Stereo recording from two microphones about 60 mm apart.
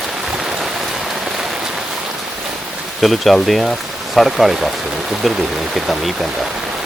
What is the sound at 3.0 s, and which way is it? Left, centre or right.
Speech, centre.